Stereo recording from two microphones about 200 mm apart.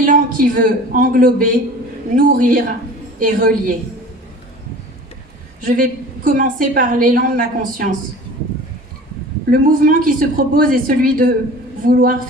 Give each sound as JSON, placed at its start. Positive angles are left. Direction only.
{"t": 0.0, "sound": "a man's voice", "side_deg": -45}
{"t": 5.6, "sound": "a woman's voice", "side_deg": -45}
{"t": 9.5, "sound": "a woman's voice", "side_deg": -45}